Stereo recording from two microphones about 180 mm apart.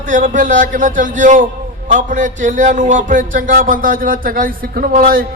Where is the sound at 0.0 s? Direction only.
45° right (ahead or behind).